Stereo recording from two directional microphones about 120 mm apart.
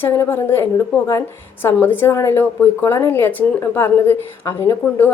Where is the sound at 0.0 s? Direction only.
20° left (ahead or behind).